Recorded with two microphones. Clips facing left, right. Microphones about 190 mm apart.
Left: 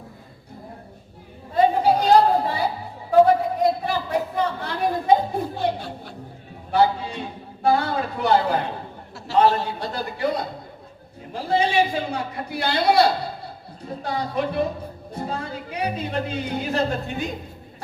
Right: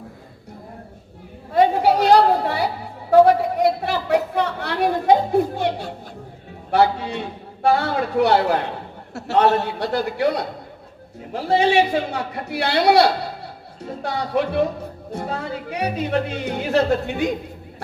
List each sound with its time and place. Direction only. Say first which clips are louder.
1.5 s chatter: right 2 dB; 85° right
3.1 s a sound: right 2 dB; 80° right
6.7 s a man's voice: right 2 dB; 80° right